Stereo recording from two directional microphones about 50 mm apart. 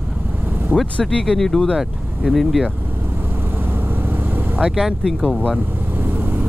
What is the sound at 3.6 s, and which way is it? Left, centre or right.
Vehicle, right.